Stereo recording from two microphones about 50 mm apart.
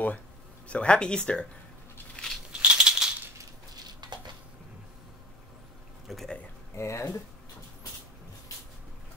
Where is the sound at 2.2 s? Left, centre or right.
Left.